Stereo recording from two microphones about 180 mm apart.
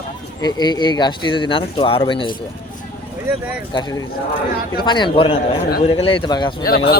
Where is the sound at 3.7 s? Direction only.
25° left (ahead or behind).